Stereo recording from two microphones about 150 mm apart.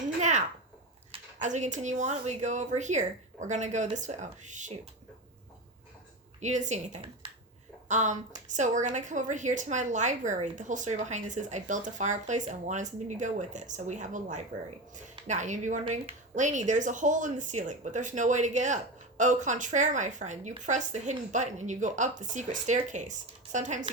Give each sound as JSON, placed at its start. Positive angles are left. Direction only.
{"t": 0.2, "sound": "a sound", "side_deg": -50}
{"t": 1.4, "sound": "a woman's voice", "side_deg": -50}
{"t": 6.4, "sound": "a woman's voice", "side_deg": -55}